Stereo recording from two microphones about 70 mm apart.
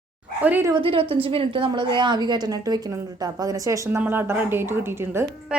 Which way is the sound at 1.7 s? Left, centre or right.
Right.